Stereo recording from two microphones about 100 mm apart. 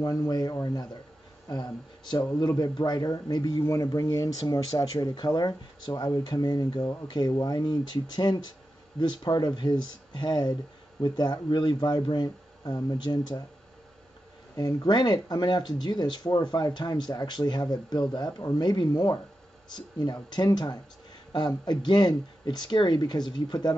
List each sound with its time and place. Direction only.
0.0 s speech: 40° left (ahead or behind)
14.5 s speech: 45° left (ahead or behind)